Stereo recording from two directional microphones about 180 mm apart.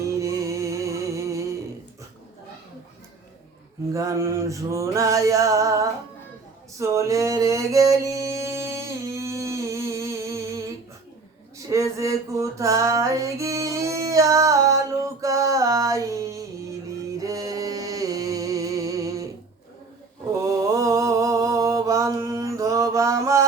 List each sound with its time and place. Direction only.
0.1 s music: 15° right (ahead or behind)
3.9 s male singing: 15° right (ahead or behind)
6.7 s music: 15° right (ahead or behind)
11.7 s female singing: 15° right (ahead or behind)
17.2 s a sound: 20° right (ahead or behind)
20.4 s mantra: 20° right (ahead or behind)